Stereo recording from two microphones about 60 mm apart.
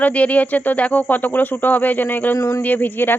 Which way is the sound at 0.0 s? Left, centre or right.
Left.